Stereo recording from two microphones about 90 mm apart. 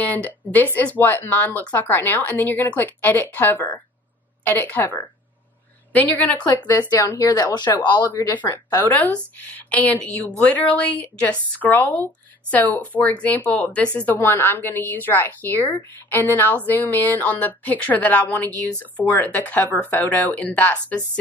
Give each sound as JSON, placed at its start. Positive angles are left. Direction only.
{"t": 0.0, "sound": "a woman's voice", "side_deg": 20}
{"t": 7.2, "sound": "speech", "side_deg": 45}
{"t": 8.6, "sound": "a woman's voice", "side_deg": 20}